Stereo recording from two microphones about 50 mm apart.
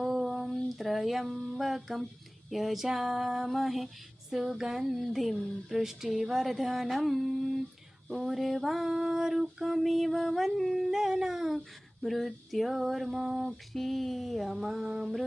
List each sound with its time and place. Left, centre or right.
0.0 s a sound: centre
2.5 s female singing: centre
13.7 s female singing: centre